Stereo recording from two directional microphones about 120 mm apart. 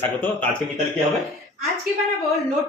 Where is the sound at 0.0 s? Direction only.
15° left (ahead or behind).